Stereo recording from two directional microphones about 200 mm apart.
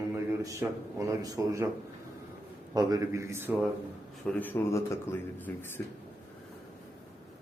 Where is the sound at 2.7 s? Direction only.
20° right (ahead or behind).